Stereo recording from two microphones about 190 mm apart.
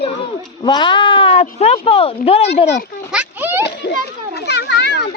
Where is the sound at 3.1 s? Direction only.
10° right (ahead or behind).